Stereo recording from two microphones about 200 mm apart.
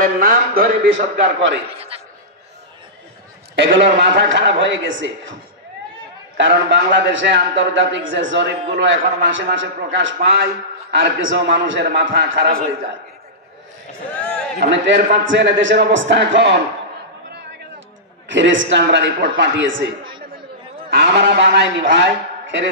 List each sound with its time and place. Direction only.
0.0 s a man's voice: 50° right (ahead or behind)
1.1 s a man's voice: 60° right (ahead or behind)
1.7 s a man's voice: 30° right (ahead or behind)
3.5 s a man's voice: 60° right (ahead or behind)
6.3 s a man's voice: 60° right (ahead or behind)
14.2 s a sound: 5° left (ahead or behind)
14.6 s a man's voice: 60° right (ahead or behind)
18.3 s a man's voice: 65° right (ahead or behind)
20.9 s a man's voice: 60° right (ahead or behind)